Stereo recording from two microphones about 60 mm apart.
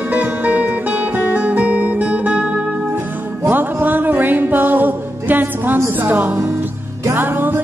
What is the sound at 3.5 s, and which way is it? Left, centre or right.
Music, right.